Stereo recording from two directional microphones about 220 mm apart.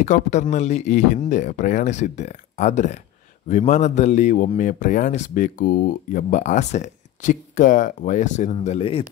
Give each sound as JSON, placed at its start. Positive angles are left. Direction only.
{"t": 0.0, "sound": "a man's voice", "side_deg": 30}